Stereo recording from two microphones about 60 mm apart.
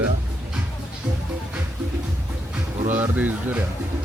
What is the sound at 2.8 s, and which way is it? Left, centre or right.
Speech, right.